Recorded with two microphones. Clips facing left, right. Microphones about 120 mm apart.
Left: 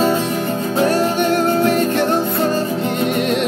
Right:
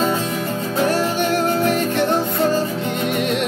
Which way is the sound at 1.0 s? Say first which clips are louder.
Left 3 dB; 15° left (ahead or behind).